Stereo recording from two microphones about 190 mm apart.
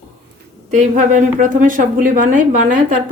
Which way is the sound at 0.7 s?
40° right (ahead or behind).